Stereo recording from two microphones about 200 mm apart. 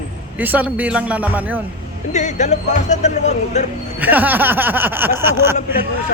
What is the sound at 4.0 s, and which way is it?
Speech, 10° right (ahead or behind).